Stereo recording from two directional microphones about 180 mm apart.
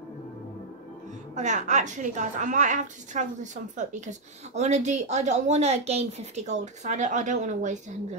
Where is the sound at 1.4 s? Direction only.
40° right (ahead or behind).